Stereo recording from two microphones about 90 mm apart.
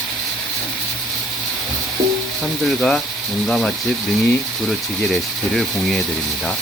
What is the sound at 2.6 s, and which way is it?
Speech, 5° left (ahead or behind).